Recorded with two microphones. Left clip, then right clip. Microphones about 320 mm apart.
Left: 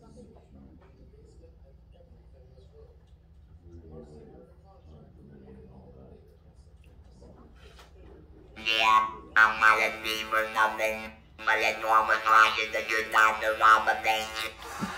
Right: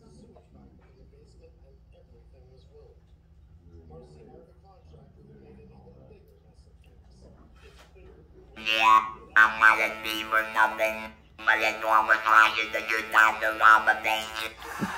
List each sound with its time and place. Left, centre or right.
8.5 s music: centre